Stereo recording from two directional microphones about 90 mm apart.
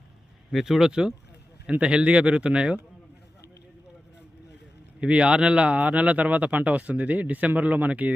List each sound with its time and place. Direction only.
0.5 s speech: 5° right (ahead or behind)
4.9 s speech: 10° right (ahead or behind)